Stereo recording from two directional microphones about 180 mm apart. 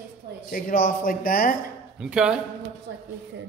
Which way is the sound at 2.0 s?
5° right (ahead or behind).